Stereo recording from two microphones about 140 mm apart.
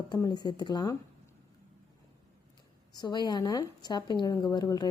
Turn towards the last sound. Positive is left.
turn(degrees=30)  # may be behind; listen again after turning